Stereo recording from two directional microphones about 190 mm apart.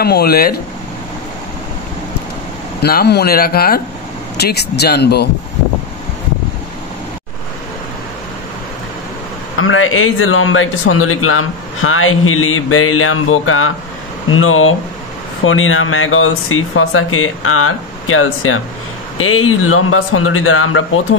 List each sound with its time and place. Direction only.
0.0 s speech: 55° left (ahead or behind)
2.8 s speech: 55° left (ahead or behind)
9.6 s a man's voice: 90° left